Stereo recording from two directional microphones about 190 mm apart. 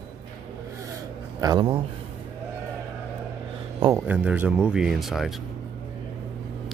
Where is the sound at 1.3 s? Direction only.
20° right (ahead or behind).